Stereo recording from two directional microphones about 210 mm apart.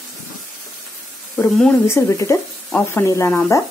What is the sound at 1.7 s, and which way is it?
Speech, 10° left (ahead or behind).